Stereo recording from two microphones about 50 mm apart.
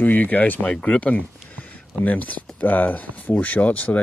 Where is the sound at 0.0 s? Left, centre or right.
Left.